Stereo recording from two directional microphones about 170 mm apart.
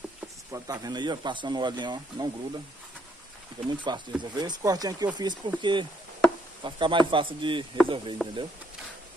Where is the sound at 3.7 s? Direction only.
25° right (ahead or behind).